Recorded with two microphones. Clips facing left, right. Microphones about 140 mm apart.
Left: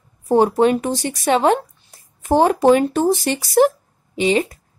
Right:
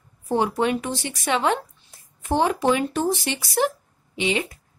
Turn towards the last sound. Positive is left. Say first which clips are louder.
# left 7 dB
turn(degrees=40)  # may be behind; listen again after turning